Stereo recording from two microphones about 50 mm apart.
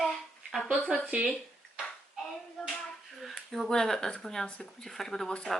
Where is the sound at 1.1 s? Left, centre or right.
Right.